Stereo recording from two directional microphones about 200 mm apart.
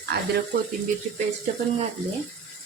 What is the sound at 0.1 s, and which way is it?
Speech, 55° right (ahead or behind).